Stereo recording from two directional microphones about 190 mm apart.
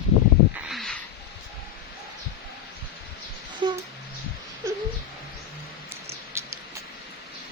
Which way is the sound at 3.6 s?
25° right (ahead or behind).